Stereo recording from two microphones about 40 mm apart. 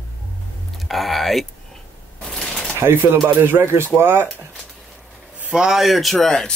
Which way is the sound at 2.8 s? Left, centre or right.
Right.